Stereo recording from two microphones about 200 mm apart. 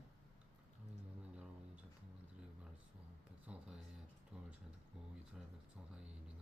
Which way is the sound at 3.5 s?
5° right (ahead or behind).